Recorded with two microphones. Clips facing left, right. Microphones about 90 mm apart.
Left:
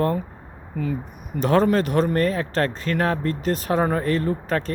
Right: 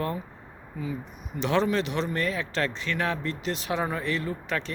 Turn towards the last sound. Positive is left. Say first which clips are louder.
# left 7 dB
turn(degrees=40)  # may be behind; listen again after turning